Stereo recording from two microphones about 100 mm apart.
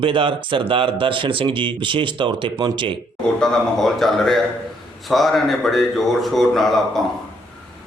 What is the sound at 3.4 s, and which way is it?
A man's voice, 5° left (ahead or behind).